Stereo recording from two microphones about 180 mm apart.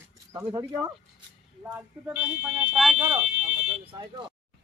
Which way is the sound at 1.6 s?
10° right (ahead or behind).